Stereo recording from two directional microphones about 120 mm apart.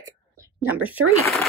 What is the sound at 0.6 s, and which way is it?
Speech, 15° right (ahead or behind).